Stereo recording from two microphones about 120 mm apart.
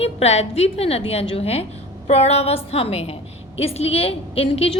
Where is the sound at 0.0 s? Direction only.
60° left (ahead or behind).